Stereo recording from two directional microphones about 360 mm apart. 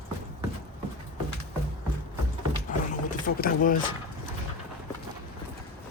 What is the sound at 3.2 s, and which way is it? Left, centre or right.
Speech, left.